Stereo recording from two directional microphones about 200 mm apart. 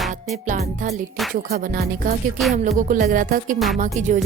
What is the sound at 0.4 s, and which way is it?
Music, 35° right (ahead or behind).